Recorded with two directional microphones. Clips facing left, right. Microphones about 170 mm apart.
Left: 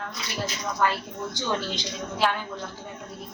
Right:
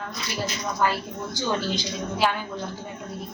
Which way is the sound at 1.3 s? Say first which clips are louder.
Right 3 dB; 5° right (ahead or behind).